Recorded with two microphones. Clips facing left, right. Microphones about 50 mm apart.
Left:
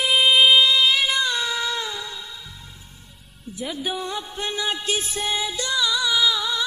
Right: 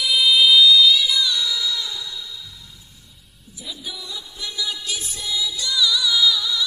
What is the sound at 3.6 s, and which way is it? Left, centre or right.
Music, left.